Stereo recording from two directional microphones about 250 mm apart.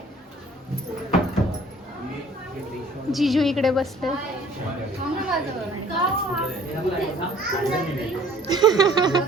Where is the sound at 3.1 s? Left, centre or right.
Centre.